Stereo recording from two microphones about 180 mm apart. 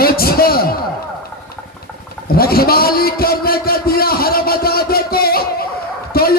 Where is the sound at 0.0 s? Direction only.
55° left (ahead or behind).